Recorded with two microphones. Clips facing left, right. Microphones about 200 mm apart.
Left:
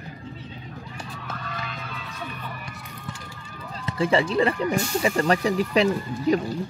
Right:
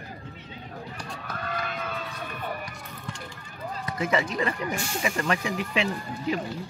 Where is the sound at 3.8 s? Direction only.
30° left (ahead or behind).